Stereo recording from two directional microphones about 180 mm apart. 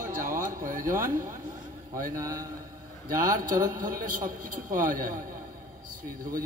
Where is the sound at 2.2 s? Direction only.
20° right (ahead or behind).